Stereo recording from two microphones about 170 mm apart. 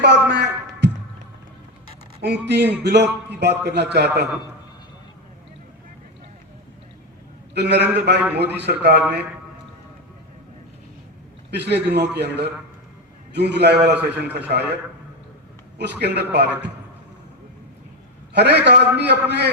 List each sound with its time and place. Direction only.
0.0 s a sound: 85° right
2.2 s a man's voice: 85° right
7.5 s a man's voice: 85° right
11.5 s a man's voice: 80° right
15.8 s a man's voice: 80° right
18.3 s a man's voice: 80° right